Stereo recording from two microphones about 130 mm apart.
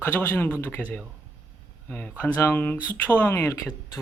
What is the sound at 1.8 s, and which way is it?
Speech, 15° left (ahead or behind).